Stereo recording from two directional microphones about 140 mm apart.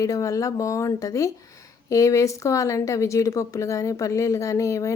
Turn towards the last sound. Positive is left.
turn(degrees=20)  # may be behind; listen again after turning